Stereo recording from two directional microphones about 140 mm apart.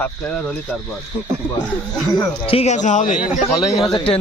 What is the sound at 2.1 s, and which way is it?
Speech, 45° left (ahead or behind).